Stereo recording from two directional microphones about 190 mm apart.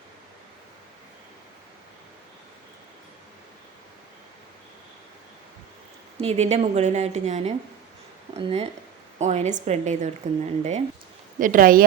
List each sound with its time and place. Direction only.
6.1 s a woman's voice: 35° right (ahead or behind)